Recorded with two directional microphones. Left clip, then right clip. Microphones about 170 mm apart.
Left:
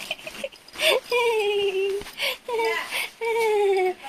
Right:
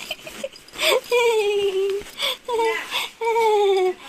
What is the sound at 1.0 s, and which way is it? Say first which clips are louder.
Whimper: right 3 dB; 20° right (ahead or behind).